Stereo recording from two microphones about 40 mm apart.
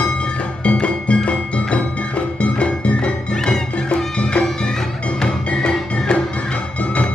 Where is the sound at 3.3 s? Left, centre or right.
Centre.